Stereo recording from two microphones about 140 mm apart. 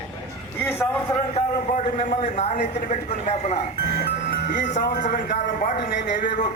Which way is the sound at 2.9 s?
60° left (ahead or behind).